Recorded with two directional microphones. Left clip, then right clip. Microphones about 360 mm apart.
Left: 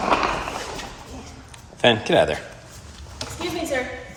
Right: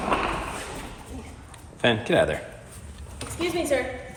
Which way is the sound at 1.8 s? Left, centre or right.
Centre.